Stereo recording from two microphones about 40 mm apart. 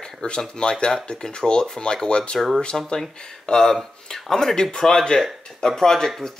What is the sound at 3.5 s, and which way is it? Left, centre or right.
Speech, left.